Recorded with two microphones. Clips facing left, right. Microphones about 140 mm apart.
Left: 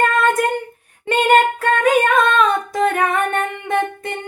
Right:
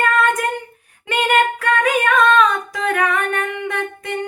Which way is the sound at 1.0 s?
30° left (ahead or behind).